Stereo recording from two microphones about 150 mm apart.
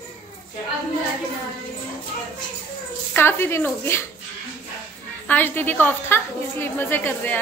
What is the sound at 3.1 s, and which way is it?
Speech, 15° left (ahead or behind).